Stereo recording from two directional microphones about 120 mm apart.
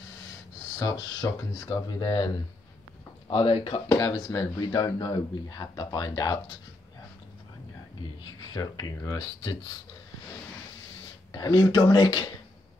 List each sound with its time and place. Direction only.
0.7 s speech: 30° left (ahead or behind); by 3.8 s 45° left (ahead or behind)
3.9 s speech: 30° left (ahead or behind)
8.5 s speech: 35° left (ahead or behind)
11.3 s speech: 35° left (ahead or behind)